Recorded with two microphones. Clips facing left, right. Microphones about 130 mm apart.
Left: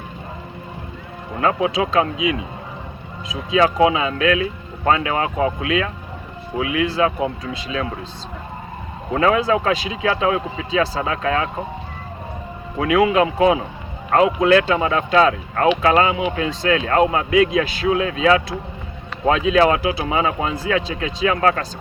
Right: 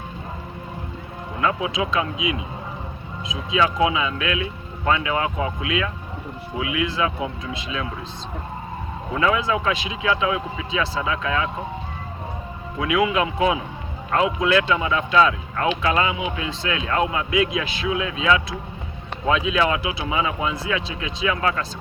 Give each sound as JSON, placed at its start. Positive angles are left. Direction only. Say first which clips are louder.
{"t": 1.4, "sound": "speech", "louder": "left 4 dB", "side_deg": 35}
{"t": 9.1, "sound": "speech", "louder": "left 4 dB", "side_deg": 35}
{"t": 12.8, "sound": "speech", "louder": "left 5 dB", "side_deg": 35}